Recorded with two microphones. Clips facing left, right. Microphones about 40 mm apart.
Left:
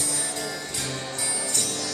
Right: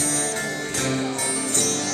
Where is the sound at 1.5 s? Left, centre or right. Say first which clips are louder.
Right 5 dB; right.